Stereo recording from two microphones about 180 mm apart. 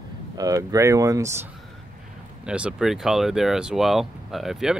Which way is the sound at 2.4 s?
5° right (ahead or behind).